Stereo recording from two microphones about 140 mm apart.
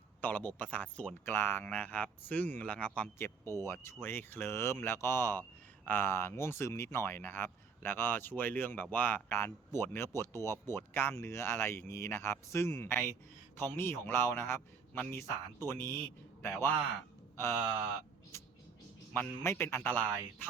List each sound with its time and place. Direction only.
0.2 s speech: 10° left (ahead or behind)
19.1 s speech: 15° left (ahead or behind)